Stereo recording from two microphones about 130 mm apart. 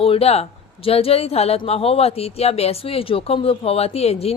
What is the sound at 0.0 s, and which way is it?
Speech, 50° left (ahead or behind).